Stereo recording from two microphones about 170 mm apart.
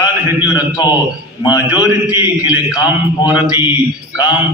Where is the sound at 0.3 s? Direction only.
10° right (ahead or behind).